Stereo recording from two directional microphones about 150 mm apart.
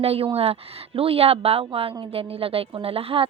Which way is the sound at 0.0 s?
40° right (ahead or behind).